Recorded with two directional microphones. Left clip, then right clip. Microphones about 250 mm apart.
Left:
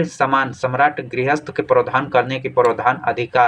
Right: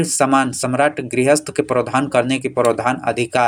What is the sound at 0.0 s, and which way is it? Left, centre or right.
Speech, right.